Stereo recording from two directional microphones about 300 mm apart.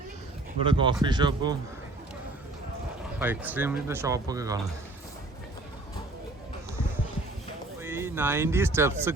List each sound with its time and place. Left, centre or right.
0.6 s speech: centre
3.2 s speech: centre
7.8 s speech: centre